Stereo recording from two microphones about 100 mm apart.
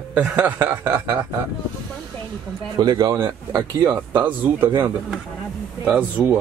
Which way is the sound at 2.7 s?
45° right (ahead or behind).